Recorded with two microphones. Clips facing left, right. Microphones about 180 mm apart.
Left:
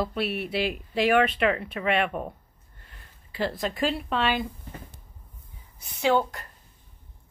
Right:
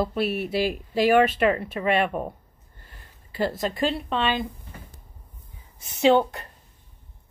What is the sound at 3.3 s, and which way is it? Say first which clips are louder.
Speech: right 3 dB; centre (ahead or behind).